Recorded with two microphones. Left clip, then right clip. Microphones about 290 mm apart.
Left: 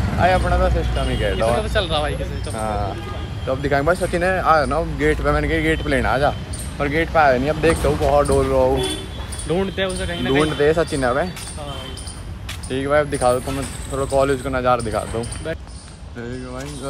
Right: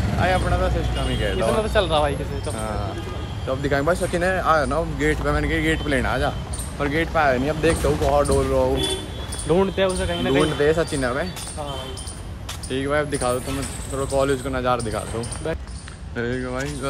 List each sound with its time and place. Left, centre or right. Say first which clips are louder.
0.2 s speech: left 5 dB; centre
1.6 s speech: right 1 dB; right
2.5 s speech: left 8 dB; centre
9.5 s speech: right 2 dB; right
10.4 s speech: left 4 dB; centre
12.6 s speech: left 4 dB; centre
16.2 s speech: right 5 dB; centre